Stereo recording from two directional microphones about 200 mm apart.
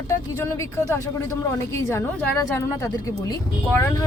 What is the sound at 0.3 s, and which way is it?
Speech, 15° left (ahead or behind).